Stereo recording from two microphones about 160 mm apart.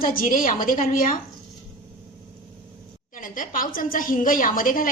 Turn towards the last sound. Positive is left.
turn(degrees=60)  # may be behind; listen again after turning